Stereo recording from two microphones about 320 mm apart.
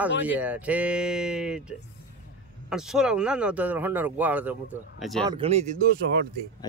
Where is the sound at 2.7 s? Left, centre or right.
Centre.